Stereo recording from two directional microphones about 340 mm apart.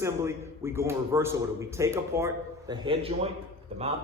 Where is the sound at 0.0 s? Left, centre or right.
Centre.